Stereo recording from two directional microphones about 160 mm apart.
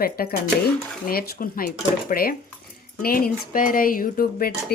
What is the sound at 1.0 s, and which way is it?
Cutlery, 65° left (ahead or behind).